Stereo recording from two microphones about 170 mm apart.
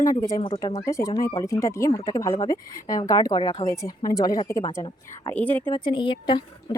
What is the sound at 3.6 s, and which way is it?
Speech, 20° left (ahead or behind).